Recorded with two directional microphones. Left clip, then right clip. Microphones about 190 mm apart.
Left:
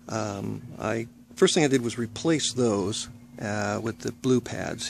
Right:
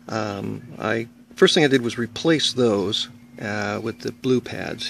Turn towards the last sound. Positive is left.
turn(degrees=-5)  # may be behind; listen again after turning